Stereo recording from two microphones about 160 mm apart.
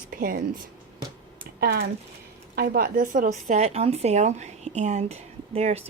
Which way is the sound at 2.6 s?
65° right (ahead or behind).